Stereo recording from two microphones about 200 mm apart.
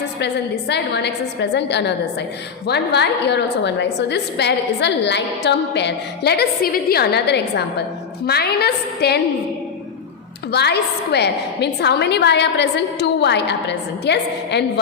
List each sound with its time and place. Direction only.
0.2 s a woman's voice: 60° left (ahead or behind)
10.5 s a woman's voice: 55° left (ahead or behind)